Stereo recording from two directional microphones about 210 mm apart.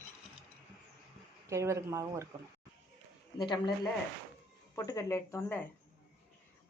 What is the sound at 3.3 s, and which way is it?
Speech, 20° left (ahead or behind).